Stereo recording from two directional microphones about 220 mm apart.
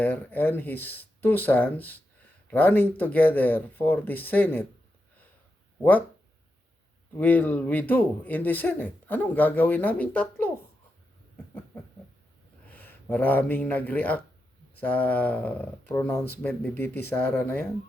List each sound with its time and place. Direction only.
0.0 s speech: 5° left (ahead or behind)
7.2 s speech: 5° left (ahead or behind)
12.6 s speech: 10° left (ahead or behind)